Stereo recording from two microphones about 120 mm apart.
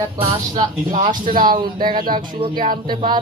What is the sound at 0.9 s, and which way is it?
Speech, 90° right.